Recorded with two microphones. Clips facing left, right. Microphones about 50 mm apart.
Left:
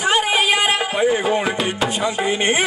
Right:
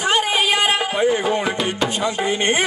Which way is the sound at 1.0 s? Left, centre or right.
Centre.